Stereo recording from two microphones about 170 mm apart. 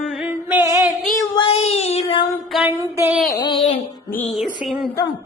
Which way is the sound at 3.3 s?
25° left (ahead or behind).